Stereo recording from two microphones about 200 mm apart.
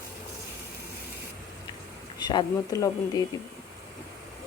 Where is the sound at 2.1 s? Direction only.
20° left (ahead or behind).